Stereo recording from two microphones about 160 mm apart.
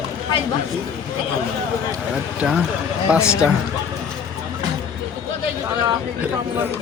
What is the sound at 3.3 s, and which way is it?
Speech, 5° right (ahead or behind).